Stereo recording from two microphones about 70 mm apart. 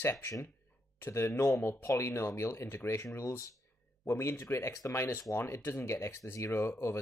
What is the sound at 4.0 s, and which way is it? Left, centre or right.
Speech, left.